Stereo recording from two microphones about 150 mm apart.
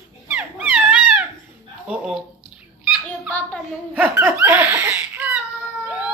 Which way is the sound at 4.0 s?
15° right (ahead or behind).